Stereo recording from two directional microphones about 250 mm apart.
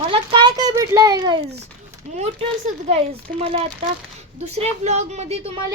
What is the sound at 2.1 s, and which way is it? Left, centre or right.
A woman's voice, right.